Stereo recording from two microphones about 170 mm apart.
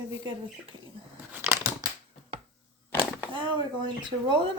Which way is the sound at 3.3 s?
25° right (ahead or behind).